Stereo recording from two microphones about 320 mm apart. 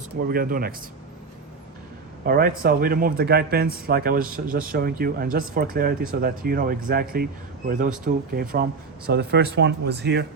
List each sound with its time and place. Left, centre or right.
0.3 s speech: right
2.2 s speech: right